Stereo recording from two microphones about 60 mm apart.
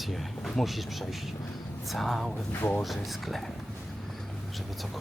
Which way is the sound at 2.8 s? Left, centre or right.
Centre.